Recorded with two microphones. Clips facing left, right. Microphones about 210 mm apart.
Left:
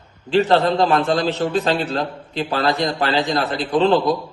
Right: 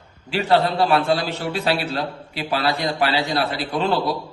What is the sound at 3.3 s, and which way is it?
Speech, 45° left (ahead or behind).